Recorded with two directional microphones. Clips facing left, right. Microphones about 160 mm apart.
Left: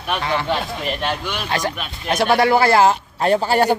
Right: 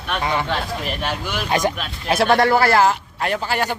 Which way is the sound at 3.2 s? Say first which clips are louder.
Left 7 dB; 30° left (ahead or behind).